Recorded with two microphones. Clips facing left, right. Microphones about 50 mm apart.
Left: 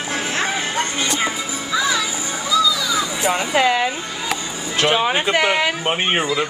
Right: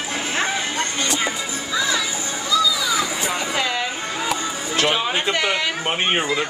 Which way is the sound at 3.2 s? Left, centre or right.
Left.